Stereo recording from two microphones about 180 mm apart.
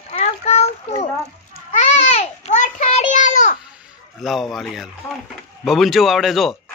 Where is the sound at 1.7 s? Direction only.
40° left (ahead or behind).